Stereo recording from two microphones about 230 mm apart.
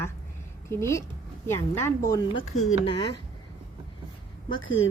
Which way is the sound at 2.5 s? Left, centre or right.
Left.